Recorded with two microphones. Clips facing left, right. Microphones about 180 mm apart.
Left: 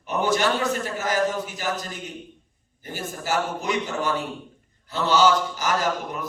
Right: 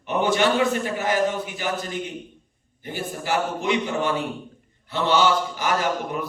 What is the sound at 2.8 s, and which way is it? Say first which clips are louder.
A man's voice: right 2 dB; 45° left (ahead or behind).